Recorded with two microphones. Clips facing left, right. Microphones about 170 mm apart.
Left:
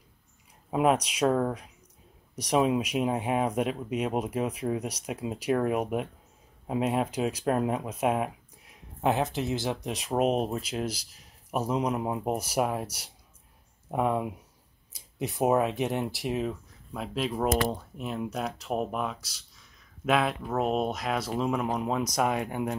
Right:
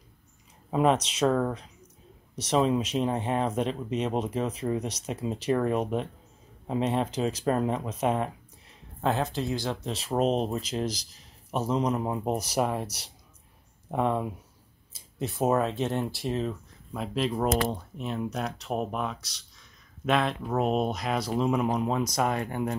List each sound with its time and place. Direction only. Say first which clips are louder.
0.7 s speech: right 1 dB; 5° left (ahead or behind)